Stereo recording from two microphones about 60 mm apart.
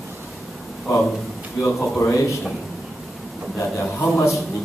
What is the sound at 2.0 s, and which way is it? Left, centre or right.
Speech, left.